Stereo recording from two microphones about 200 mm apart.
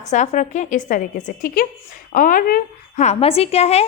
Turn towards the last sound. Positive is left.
turn(degrees=30)  # may be behind; listen again after turning